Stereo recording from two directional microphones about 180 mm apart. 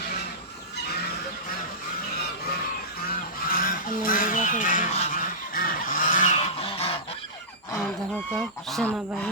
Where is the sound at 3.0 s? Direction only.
55° left (ahead or behind); by 7.0 s 35° left (ahead or behind).